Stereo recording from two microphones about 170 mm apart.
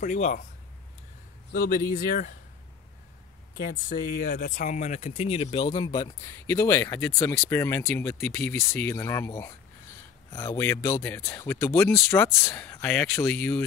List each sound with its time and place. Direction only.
0.0 s speech: 50° left (ahead or behind)
1.5 s speech: 55° left (ahead or behind)
3.5 s speech: 55° left (ahead or behind); by 6.3 s 25° left (ahead or behind)
6.4 s speech: 15° left (ahead or behind)